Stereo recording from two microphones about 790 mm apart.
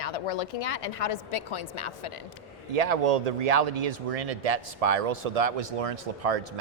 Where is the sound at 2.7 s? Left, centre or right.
Right.